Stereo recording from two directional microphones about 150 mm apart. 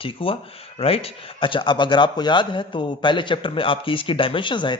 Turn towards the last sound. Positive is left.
turn(degrees=30)  # may be behind; listen again after turning